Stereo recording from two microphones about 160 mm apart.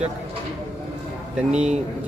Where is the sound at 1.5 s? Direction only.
5° right (ahead or behind).